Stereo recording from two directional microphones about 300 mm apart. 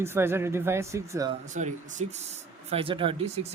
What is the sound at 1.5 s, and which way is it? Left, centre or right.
Speech, right.